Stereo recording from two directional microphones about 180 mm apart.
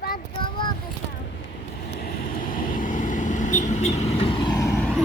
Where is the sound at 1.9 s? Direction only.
55° left (ahead or behind); by 4.8 s 20° left (ahead or behind).